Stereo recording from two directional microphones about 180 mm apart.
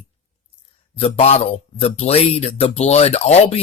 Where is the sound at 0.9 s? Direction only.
35° left (ahead or behind).